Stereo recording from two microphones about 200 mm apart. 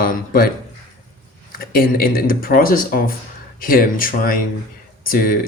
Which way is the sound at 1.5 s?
45° left (ahead or behind).